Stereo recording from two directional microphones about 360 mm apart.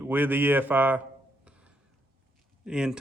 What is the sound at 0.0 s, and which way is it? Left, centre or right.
Speech, centre.